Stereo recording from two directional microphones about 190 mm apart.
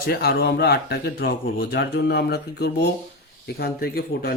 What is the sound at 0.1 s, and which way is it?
Speech, 55° left (ahead or behind).